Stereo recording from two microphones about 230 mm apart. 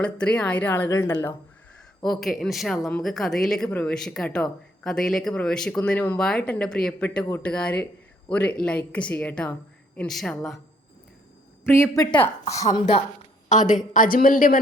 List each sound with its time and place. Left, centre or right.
0.0 s a woman's voice: centre
11.6 s a woman's voice: centre
12.6 s a woman's voice: left